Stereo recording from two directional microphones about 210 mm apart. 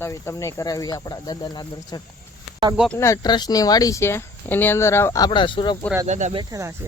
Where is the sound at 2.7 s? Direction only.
Centre (ahead or behind).